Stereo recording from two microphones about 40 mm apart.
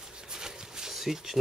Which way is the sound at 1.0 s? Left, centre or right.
Centre.